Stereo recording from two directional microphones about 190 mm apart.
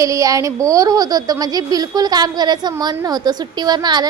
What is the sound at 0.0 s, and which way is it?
A woman's voice, 15° right (ahead or behind).